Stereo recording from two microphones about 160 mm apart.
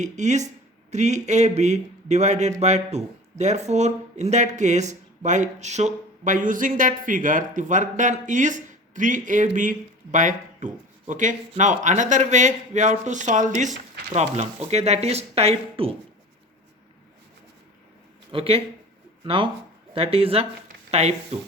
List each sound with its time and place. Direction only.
0.0 s speech: 45° right (ahead or behind)
18.3 s speech: 35° right (ahead or behind)